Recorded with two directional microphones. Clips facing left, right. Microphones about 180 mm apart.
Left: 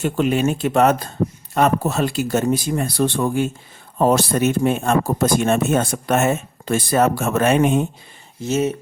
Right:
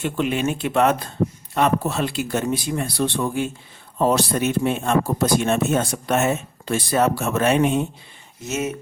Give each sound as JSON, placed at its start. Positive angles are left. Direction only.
{"t": 0.0, "sound": "speech", "side_deg": 40}
{"t": 8.4, "sound": "speech", "side_deg": 30}